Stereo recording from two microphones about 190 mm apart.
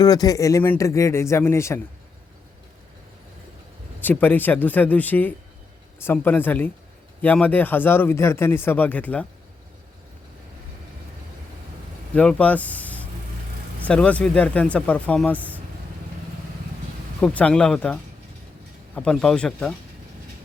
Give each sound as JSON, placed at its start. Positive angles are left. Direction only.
{"t": 0.0, "sound": "speech", "side_deg": 20}
{"t": 4.0, "sound": "speech", "side_deg": 10}
{"t": 12.1, "sound": "speech", "side_deg": 5}
{"t": 17.2, "sound": "speech", "side_deg": 5}
{"t": 18.9, "sound": "speech", "side_deg": 5}